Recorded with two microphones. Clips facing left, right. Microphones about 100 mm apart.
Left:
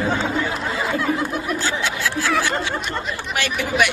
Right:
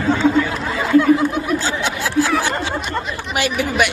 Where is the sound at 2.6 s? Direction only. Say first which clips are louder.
Right 2 dB; 30° right (ahead or behind).